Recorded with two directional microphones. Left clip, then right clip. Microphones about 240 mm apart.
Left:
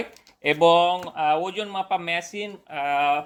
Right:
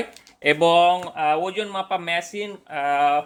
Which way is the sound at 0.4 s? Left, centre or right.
Right.